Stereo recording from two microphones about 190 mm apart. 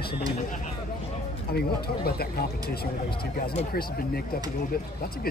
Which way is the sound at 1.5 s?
55° left (ahead or behind).